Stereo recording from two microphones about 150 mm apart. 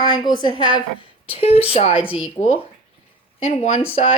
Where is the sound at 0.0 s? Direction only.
30° left (ahead or behind).